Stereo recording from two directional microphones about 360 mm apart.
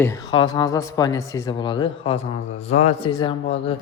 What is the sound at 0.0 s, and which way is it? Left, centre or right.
Speech, centre.